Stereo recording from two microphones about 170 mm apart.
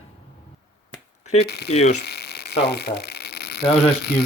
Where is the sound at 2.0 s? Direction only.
75° left (ahead or behind).